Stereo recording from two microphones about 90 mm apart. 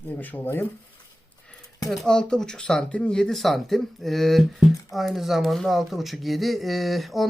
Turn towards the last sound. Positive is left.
turn(degrees=0)  # may be behind; listen again after turning